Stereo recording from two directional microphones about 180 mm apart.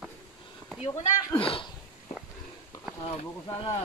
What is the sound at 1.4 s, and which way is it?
Speech, 30° left (ahead or behind).